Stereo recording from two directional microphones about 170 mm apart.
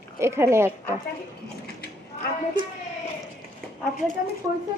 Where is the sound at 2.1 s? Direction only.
40° left (ahead or behind).